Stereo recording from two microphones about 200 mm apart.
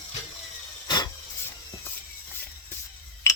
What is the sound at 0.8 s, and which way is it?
Filing, 20° left (ahead or behind).